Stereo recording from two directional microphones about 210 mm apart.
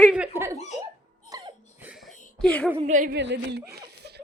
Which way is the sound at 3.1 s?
55° right (ahead or behind).